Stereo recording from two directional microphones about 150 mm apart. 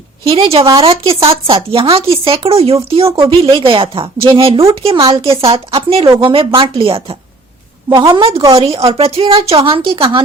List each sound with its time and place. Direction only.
0.3 s speech: 40° right (ahead or behind)
7.9 s a woman's voice: 25° right (ahead or behind)